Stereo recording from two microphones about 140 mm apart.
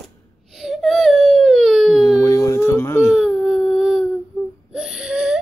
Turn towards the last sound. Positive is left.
turn(degrees=-5)  # may be behind; listen again after turning